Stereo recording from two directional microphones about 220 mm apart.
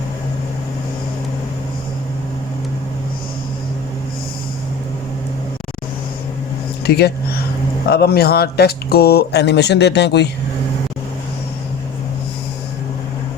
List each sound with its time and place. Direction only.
6.8 s speech: 45° left (ahead or behind)